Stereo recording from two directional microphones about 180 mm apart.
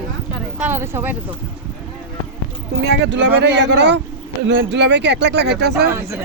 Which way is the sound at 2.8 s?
80° right.